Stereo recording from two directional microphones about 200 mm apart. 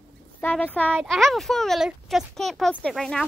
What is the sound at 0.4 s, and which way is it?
Speech, 10° left (ahead or behind).